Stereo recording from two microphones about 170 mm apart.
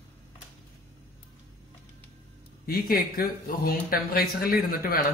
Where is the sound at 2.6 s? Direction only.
60° left (ahead or behind).